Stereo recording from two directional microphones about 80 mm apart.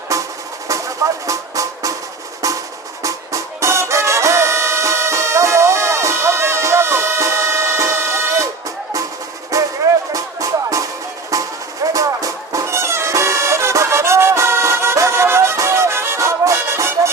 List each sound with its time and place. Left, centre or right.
0.1 s music: right
3.0 s music: right
9.5 s music: right
11.9 s music: right